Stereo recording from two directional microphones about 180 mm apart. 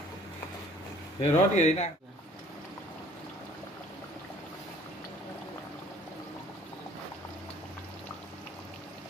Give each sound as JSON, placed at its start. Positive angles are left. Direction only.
{"t": 1.2, "sound": "speech", "side_deg": 40}